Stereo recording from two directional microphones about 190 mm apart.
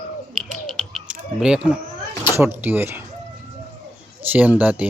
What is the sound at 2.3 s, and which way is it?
Speech, 10° right (ahead or behind).